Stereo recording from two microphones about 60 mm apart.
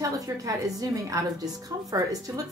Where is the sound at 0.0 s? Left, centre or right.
Right.